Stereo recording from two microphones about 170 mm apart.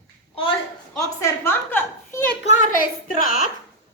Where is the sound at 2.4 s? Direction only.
50° left (ahead or behind).